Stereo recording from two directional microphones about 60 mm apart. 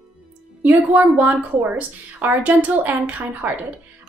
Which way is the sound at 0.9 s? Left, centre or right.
Right.